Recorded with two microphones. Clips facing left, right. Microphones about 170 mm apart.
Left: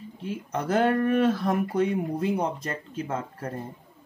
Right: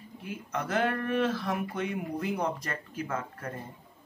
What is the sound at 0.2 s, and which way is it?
Speech, 30° left (ahead or behind).